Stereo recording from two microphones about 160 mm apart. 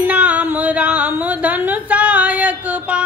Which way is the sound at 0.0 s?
10° right (ahead or behind).